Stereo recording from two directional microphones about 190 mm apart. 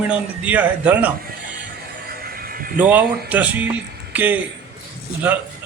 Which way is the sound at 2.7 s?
10° right (ahead or behind).